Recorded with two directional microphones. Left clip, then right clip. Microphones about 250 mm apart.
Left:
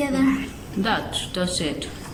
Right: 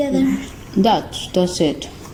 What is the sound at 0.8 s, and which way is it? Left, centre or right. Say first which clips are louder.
Speech: right 6 dB; right.